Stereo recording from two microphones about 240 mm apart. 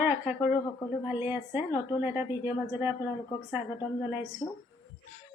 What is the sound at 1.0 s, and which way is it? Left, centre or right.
Speech, centre.